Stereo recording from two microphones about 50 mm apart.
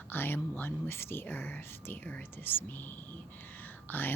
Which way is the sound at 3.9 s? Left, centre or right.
Left.